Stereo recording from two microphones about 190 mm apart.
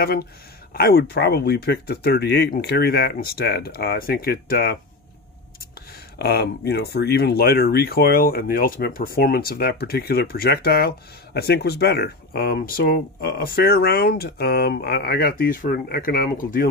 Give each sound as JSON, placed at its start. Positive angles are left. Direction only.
{"t": 0.0, "sound": "speech", "side_deg": 55}
{"t": 6.1, "sound": "speech", "side_deg": 55}